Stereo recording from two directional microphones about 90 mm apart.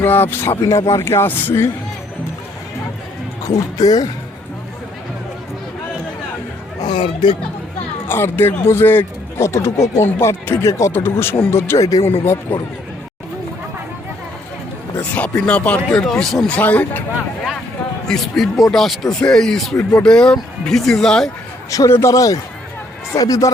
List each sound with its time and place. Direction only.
0.0 s a man's voice: 25° left (ahead or behind)
3.4 s speech: 40° left (ahead or behind)
6.8 s speech: 55° left (ahead or behind)
8.0 s a man's voice: 25° left (ahead or behind)
12.0 s a man's voice: 25° left (ahead or behind)
15.1 s speech: 15° left (ahead or behind)
16.5 s a man's voice: 15° left (ahead or behind)
18.1 s speech: centre (ahead or behind)
21.7 s speech: 40° left (ahead or behind)